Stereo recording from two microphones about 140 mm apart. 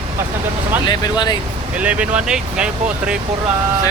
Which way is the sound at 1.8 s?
10° right (ahead or behind).